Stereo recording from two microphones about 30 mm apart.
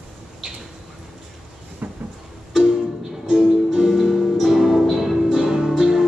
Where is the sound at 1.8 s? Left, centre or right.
Right.